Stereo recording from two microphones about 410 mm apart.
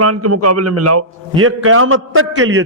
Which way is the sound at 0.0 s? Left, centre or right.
Right.